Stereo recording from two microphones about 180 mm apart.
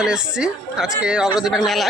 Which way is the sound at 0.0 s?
5° right (ahead or behind).